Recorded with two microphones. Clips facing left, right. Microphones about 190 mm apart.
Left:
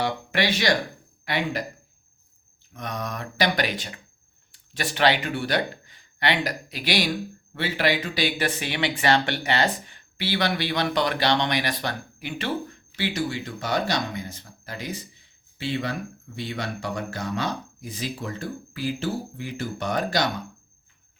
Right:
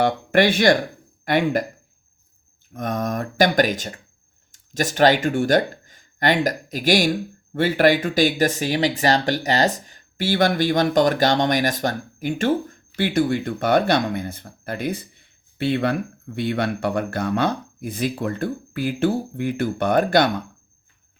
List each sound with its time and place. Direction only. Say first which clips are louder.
0.0 s speech: right 8 dB; 50° right (ahead or behind)
2.7 s speech: right 8 dB; 50° right (ahead or behind)